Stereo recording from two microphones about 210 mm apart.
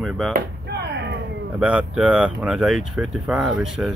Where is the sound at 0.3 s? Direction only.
50° right (ahead or behind).